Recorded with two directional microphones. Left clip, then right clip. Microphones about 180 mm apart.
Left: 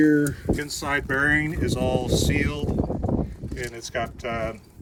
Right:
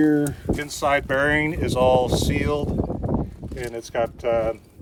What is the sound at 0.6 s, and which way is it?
Speech, 35° right (ahead or behind).